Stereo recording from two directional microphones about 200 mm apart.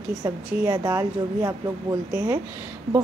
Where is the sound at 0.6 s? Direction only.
15° right (ahead or behind).